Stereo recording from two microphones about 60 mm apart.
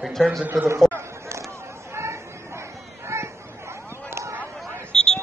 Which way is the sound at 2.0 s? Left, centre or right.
Right.